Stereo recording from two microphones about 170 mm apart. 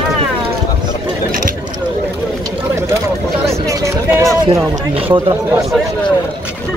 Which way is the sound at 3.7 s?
15° right (ahead or behind).